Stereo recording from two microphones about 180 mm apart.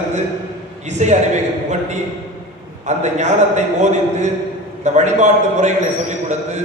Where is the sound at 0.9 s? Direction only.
40° right (ahead or behind).